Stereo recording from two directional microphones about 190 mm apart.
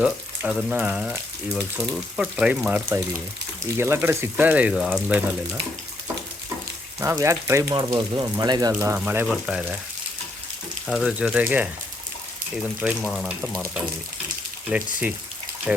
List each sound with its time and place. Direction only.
0.0 s speech: 5° right (ahead or behind)
7.0 s speech: 15° right (ahead or behind)
10.8 s speech: centre (ahead or behind)